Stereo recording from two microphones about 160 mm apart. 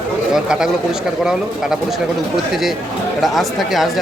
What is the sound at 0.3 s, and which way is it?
Speech, 5° right (ahead or behind).